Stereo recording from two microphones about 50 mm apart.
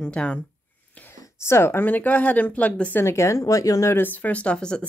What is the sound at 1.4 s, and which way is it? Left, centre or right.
Speech, left.